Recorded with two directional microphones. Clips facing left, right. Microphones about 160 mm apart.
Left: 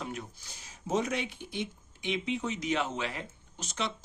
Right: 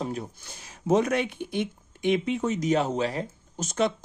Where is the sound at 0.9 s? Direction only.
55° right (ahead or behind).